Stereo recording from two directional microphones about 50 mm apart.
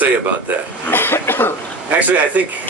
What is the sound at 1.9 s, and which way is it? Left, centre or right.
Speech, right.